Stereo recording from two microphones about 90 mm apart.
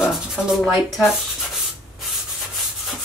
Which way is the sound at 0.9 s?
Centre (ahead or behind).